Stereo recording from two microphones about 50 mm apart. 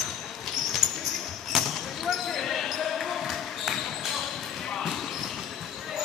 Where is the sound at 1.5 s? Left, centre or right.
Centre.